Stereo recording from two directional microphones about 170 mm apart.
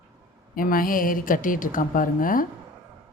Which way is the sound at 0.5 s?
55° left (ahead or behind).